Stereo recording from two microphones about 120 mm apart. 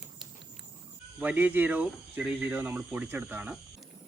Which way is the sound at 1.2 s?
15° right (ahead or behind).